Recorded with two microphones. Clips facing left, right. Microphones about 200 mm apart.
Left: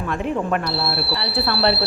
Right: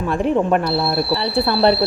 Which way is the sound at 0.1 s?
35° right (ahead or behind).